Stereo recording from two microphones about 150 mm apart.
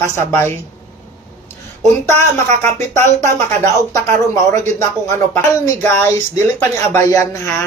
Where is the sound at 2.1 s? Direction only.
15° left (ahead or behind).